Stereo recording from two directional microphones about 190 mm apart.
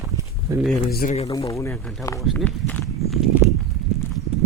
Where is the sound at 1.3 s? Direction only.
15° left (ahead or behind).